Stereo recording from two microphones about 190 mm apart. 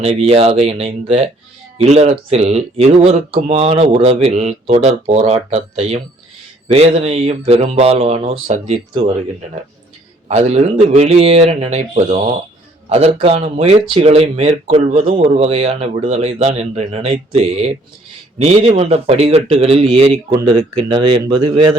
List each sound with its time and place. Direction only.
0.0 s a man's voice: 35° right (ahead or behind)
10.2 s a man's voice: 35° right (ahead or behind)